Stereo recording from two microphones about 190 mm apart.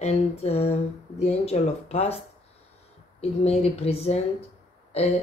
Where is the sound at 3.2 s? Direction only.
35° left (ahead or behind).